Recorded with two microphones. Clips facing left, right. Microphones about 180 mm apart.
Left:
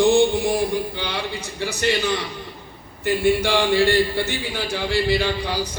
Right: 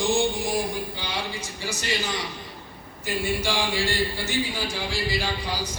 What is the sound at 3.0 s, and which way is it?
A man's voice, 60° left (ahead or behind).